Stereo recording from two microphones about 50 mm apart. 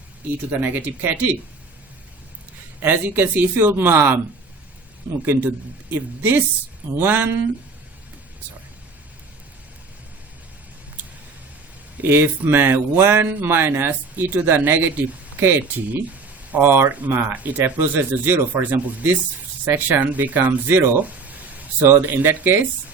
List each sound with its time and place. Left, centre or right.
0.6 s speech: right
2.8 s speech: right
5.2 s speech: right
12.0 s speech: right
19.6 s speech: right
20.0 s speech: right
21.0 s a sound: right
21.8 s speech: right